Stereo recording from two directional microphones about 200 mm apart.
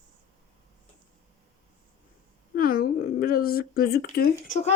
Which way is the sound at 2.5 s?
45° left (ahead or behind).